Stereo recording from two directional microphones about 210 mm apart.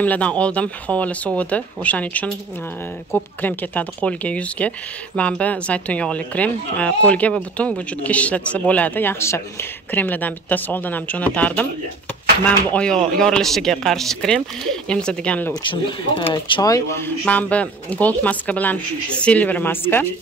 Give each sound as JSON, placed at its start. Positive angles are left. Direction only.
{"t": 0.0, "sound": "speech", "side_deg": 5}
{"t": 16.3, "sound": "speech", "side_deg": 20}